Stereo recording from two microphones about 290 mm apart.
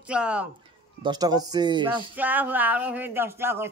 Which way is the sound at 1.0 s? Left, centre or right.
Centre.